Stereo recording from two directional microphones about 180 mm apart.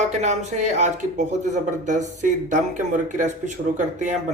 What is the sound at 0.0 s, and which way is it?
Speech, 40° right (ahead or behind).